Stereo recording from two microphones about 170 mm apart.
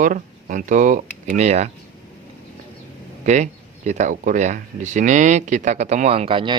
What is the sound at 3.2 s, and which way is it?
Speech, 45° right (ahead or behind).